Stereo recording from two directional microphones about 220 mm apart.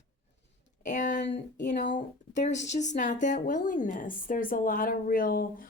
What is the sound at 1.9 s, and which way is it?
Speech, 35° left (ahead or behind).